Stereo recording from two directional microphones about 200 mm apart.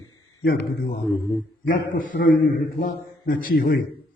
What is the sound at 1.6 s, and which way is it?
A man's voice, 45° left (ahead or behind).